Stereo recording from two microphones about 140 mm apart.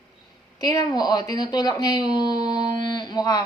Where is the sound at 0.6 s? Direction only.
25° left (ahead or behind).